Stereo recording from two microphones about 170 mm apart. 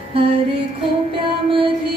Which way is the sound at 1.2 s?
30° right (ahead or behind).